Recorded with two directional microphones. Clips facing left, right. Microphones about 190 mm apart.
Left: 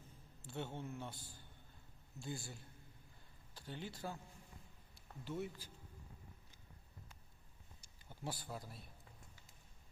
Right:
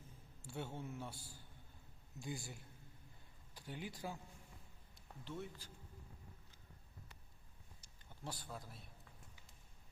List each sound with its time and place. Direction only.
0.4 s a man's voice: 10° right (ahead or behind)
4.9 s speech: 5° left (ahead or behind)
7.8 s a sound: 10° left (ahead or behind)